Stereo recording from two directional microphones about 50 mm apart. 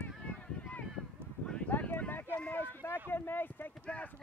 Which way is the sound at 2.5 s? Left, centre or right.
Left.